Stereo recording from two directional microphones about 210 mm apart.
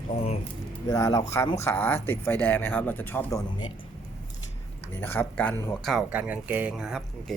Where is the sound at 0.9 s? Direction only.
15° left (ahead or behind).